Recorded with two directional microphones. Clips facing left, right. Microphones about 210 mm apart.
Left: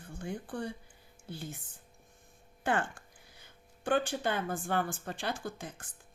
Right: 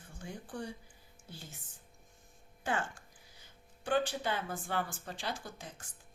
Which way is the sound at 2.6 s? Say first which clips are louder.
Left 4 dB; 60° left (ahead or behind).